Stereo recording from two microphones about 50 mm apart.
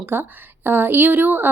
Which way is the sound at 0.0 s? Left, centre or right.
Right.